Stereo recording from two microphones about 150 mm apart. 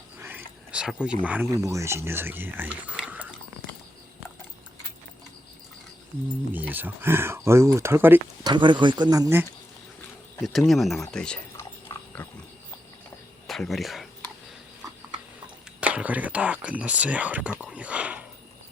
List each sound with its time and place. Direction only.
0.2 s wild animals: 15° right (ahead or behind)
1.5 s speech: 20° right (ahead or behind)
6.5 s speech: 10° right (ahead or behind)
8.4 s speech: 30° right (ahead or behind)
10.4 s speech: centre (ahead or behind)
11.9 s pig: 20° left (ahead or behind)
13.5 s speech: centre (ahead or behind)
15.8 s speech: 10° right (ahead or behind)